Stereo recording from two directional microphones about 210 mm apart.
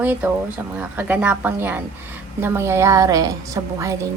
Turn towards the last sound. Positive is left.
turn(degrees=-15)  # may be behind; listen again after turning